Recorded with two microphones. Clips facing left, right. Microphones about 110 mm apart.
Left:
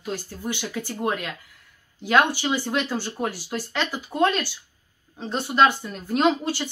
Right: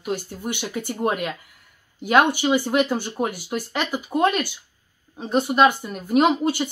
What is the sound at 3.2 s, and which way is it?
Speech, 55° right (ahead or behind).